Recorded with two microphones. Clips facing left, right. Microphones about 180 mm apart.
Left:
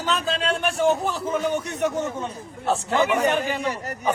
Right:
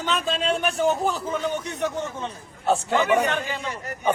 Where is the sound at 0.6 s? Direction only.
Centre (ahead or behind).